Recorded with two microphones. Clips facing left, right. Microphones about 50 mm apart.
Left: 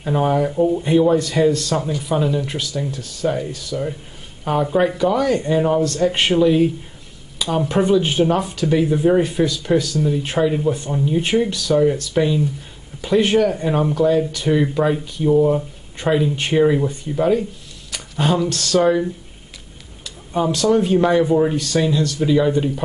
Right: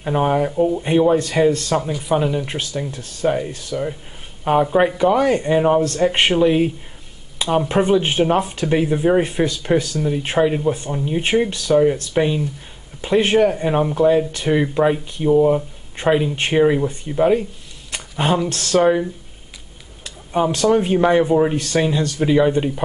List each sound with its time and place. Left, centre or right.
0.0 s speech: centre
0.5 s speech: centre
0.8 s speech: right
1.8 s speech: centre
20.5 s speech: right